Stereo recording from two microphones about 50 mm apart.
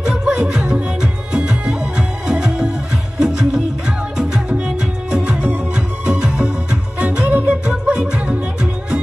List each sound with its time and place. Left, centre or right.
0.0 s music: centre